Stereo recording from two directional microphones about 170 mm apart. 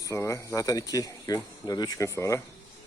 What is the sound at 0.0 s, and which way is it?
Speech, 15° left (ahead or behind).